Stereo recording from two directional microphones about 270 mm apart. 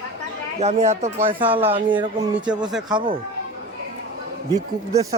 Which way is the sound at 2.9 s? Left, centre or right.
Centre.